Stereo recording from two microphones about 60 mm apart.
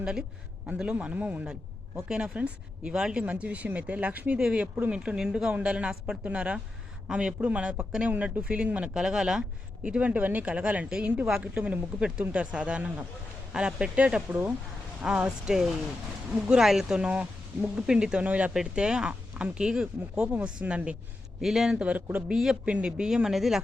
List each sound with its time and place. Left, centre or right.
0.0 s speech: centre
9.0 s speech: centre; by 14.5 s right
15.0 s speech: centre
21.4 s speech: centre
21.8 s speech: right
22.3 s speech: centre
22.6 s speech: centre